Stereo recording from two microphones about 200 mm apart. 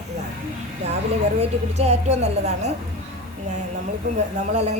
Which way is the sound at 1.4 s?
35° right (ahead or behind).